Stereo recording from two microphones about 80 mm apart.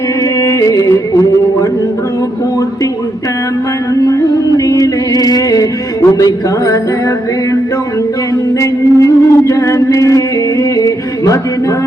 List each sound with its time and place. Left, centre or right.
0.4 s music: left
4.0 s music: left
8.5 s music: left